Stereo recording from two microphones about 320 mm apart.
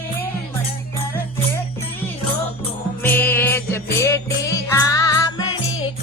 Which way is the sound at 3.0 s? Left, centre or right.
Centre.